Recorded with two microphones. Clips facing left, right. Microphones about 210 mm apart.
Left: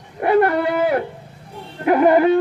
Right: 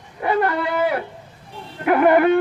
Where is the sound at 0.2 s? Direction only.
55° left (ahead or behind).